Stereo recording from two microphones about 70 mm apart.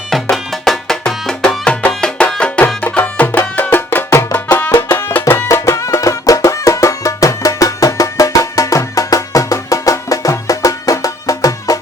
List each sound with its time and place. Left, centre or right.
0.1 s music: centre; by 4.3 s left
4.3 s music: left
4.9 s music: left